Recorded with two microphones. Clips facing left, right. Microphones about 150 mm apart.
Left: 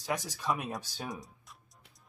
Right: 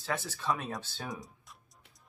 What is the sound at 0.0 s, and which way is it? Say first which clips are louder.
Speech: left 1 dB; 15° left (ahead or behind).